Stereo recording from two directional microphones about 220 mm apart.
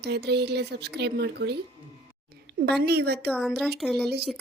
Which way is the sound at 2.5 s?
50° right (ahead or behind).